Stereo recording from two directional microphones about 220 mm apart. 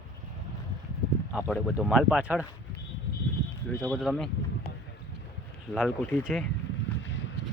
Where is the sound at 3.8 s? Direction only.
5° left (ahead or behind).